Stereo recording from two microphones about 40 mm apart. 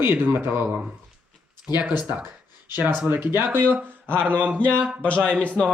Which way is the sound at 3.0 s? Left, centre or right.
Right.